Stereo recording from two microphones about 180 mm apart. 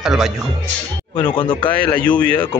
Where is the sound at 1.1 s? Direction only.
25° left (ahead or behind).